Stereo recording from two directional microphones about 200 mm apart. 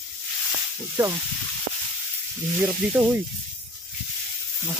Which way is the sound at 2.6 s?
10° right (ahead or behind).